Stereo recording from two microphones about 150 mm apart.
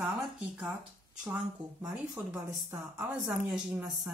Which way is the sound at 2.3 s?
15° right (ahead or behind).